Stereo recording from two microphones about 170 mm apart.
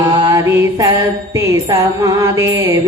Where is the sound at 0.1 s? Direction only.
25° right (ahead or behind).